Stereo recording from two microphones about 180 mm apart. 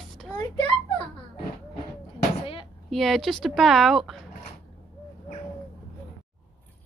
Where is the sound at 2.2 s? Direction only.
30° left (ahead or behind).